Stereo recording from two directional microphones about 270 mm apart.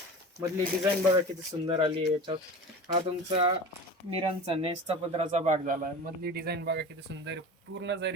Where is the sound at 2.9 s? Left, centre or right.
Right.